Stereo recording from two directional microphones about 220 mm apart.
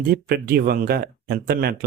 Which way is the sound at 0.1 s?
45° right (ahead or behind).